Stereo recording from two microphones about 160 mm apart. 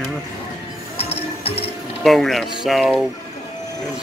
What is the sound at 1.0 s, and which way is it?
Music, 40° left (ahead or behind).